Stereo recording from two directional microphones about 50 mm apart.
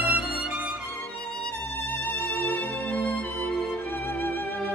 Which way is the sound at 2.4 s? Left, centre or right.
Left.